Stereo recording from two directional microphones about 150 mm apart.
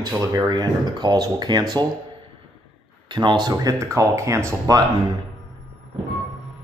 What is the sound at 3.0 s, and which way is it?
Speech, 30° right (ahead or behind).